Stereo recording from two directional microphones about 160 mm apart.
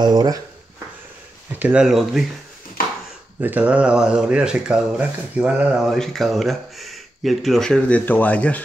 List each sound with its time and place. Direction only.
0.0 s speech: 25° right (ahead or behind)
1.6 s speech: 5° right (ahead or behind)
3.3 s speech: 10° right (ahead or behind); by 8.6 s 10° left (ahead or behind)